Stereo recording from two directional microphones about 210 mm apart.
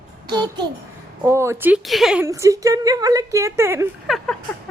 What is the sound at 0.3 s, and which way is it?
A child's voice, 20° right (ahead or behind).